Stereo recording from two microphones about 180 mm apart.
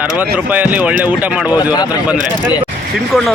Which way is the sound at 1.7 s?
20° left (ahead or behind).